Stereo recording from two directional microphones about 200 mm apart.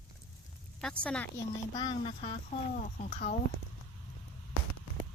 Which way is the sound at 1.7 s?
20° left (ahead or behind).